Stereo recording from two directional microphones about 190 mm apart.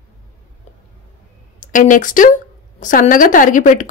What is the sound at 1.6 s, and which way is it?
A woman's voice, 45° left (ahead or behind).